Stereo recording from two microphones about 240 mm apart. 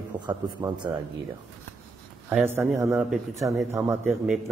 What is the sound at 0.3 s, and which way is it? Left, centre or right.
Speech, centre.